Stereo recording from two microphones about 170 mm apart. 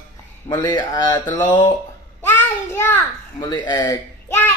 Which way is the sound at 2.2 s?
15° left (ahead or behind).